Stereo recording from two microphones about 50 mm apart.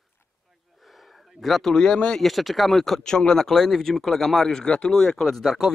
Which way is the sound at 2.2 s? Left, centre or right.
Centre.